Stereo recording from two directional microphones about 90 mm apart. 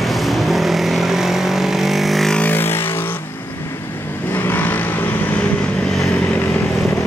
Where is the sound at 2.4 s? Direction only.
25° left (ahead or behind).